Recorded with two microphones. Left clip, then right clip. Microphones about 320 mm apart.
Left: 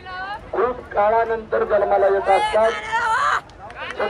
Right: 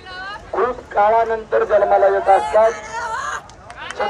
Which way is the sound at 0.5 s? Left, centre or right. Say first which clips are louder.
Right 2 dB; right.